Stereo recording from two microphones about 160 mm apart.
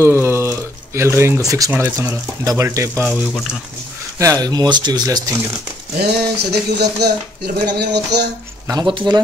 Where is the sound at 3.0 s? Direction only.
Centre (ahead or behind).